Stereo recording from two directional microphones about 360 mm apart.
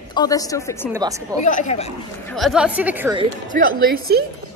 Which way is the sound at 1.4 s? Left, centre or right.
Centre.